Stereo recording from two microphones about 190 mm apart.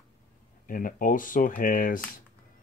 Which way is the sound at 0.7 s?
45° left (ahead or behind).